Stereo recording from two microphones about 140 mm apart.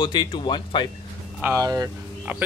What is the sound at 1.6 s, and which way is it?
Speech, 25° right (ahead or behind).